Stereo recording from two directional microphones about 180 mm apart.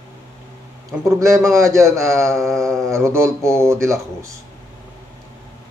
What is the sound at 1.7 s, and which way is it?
Speech, 15° right (ahead or behind).